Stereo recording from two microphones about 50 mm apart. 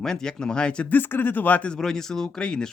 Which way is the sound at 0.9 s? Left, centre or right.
Left.